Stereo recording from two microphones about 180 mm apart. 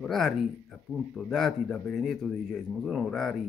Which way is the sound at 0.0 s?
5° left (ahead or behind).